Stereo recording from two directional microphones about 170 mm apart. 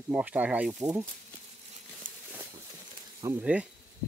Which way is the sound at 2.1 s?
50° right (ahead or behind).